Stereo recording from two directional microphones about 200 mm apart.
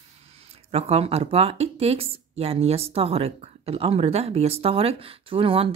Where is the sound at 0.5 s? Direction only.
30° right (ahead or behind).